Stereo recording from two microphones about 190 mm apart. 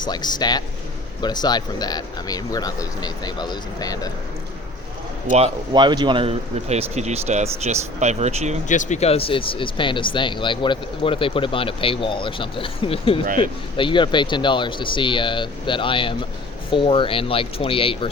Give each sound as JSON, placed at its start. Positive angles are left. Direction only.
{"t": 0.0, "sound": "speech", "side_deg": 20}
{"t": 5.7, "sound": "speech", "side_deg": -25}
{"t": 8.6, "sound": "speech", "side_deg": 40}
{"t": 13.2, "sound": "speech", "side_deg": -45}
{"t": 13.7, "sound": "speech", "side_deg": 25}